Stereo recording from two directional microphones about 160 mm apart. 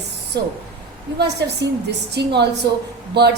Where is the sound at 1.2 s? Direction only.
90° right.